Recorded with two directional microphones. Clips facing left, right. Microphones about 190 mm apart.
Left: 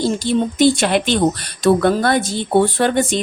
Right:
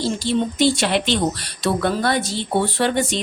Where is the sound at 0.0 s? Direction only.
50° left (ahead or behind).